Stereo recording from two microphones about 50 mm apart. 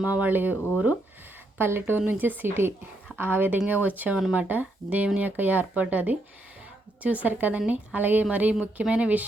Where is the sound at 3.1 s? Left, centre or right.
Right.